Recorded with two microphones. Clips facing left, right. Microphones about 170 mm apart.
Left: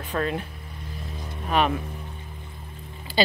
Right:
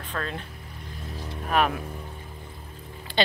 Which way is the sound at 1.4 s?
Centre (ahead or behind).